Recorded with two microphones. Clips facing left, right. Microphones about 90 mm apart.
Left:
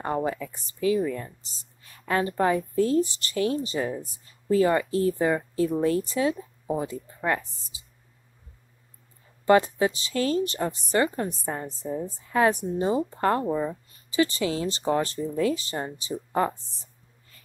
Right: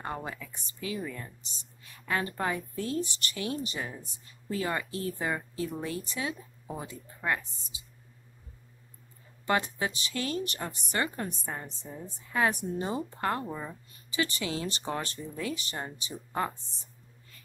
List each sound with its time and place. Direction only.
0.0 s a woman's voice: 30° left (ahead or behind)
9.5 s a woman's voice: 30° left (ahead or behind)
13.5 s speech: 20° left (ahead or behind)
14.1 s a woman's voice: 30° left (ahead or behind)